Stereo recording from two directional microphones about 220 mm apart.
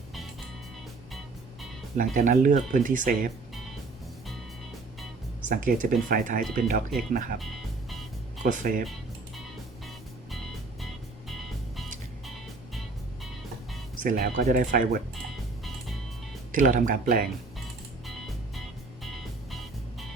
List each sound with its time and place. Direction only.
2.0 s speech: 35° right (ahead or behind)
5.4 s speech: 35° right (ahead or behind)
7.3 s music: centre (ahead or behind)
8.4 s speech: 35° right (ahead or behind)
14.0 s speech: 35° right (ahead or behind)
16.5 s speech: 35° right (ahead or behind)
19.0 s music: centre (ahead or behind)